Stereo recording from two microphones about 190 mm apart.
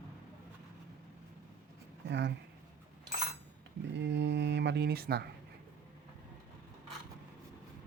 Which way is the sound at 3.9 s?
65° right (ahead or behind).